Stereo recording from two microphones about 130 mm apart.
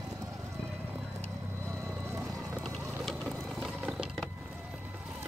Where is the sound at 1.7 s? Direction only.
20° right (ahead or behind).